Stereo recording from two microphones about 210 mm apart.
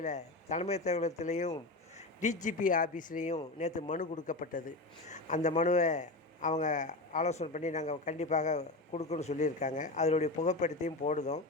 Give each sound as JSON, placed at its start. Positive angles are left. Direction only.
{"t": 0.0, "sound": "speech", "side_deg": 35}